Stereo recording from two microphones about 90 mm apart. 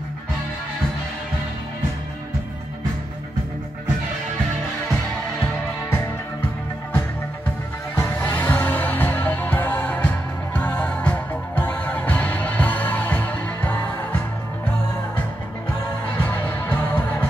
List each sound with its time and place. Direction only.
5.4 s music: 25° left (ahead or behind)
8.2 s music: 20° left (ahead or behind)
16.2 s music: 20° left (ahead or behind)